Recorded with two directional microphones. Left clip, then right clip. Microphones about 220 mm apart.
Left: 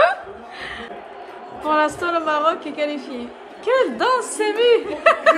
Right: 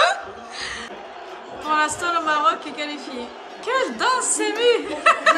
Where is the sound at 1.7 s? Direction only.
10° left (ahead or behind).